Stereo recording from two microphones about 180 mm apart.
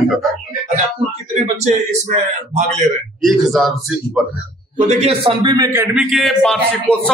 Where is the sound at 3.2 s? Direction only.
Centre (ahead or behind).